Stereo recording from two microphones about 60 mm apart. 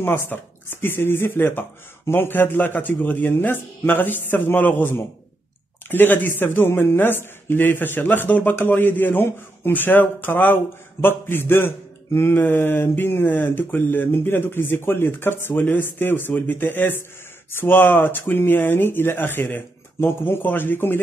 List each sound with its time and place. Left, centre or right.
0.0 s speech: left